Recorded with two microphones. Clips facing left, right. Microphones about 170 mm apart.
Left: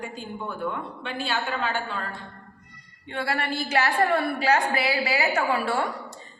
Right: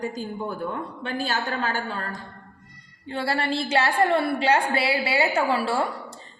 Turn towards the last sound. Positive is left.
turn(degrees=-30)  # may be behind; listen again after turning